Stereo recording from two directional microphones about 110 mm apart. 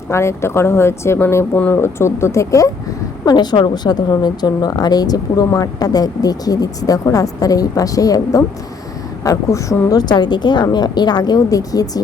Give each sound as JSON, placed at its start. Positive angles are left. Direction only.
{"t": 0.1, "sound": "speech", "side_deg": 25}
{"t": 1.5, "sound": "speech", "side_deg": 15}
{"t": 1.8, "sound": "speech", "side_deg": 25}
{"t": 3.2, "sound": "speech", "side_deg": 40}